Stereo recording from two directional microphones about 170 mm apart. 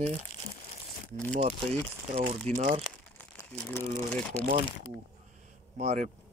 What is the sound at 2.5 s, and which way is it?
Speech, 10° left (ahead or behind).